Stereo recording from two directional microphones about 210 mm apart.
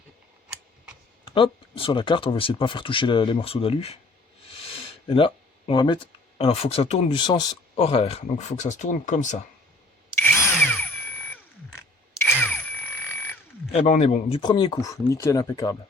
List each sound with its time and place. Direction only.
1.3 s speech: 25° left (ahead or behind)
10.2 s tools: 10° left (ahead or behind)
12.3 s a sound: 10° left (ahead or behind)
13.7 s speech: 30° left (ahead or behind); by 15.8 s 15° left (ahead or behind)